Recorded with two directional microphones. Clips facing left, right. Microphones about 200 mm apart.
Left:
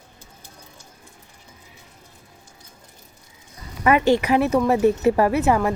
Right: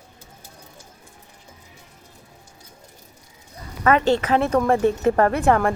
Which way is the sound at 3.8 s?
15° left (ahead or behind).